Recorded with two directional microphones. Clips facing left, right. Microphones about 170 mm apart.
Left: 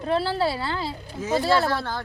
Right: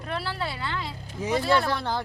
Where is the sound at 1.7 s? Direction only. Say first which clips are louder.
Left 1 dB; 15° right (ahead or behind).